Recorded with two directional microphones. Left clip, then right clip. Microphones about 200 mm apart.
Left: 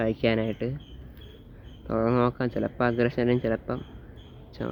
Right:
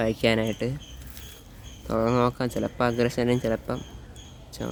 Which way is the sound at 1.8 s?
20° right (ahead or behind).